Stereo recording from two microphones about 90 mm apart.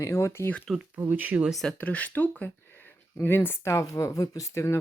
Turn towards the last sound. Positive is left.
turn(degrees=35)  # may be behind; listen again after turning